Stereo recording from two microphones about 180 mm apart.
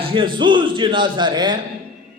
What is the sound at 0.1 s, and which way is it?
Speech, 30° right (ahead or behind).